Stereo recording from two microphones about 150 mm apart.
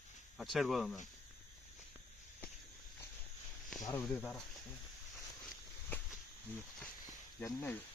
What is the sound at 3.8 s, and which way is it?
Speech, 15° left (ahead or behind).